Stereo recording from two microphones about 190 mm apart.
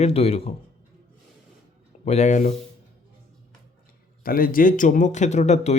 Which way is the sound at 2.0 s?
35° left (ahead or behind).